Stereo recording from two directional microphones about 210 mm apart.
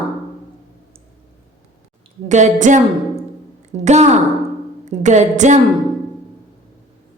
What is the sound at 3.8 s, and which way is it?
A woman's voice, 35° right (ahead or behind).